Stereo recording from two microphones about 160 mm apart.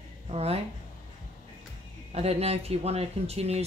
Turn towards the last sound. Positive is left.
turn(degrees=-40)  # may be behind; listen again after turning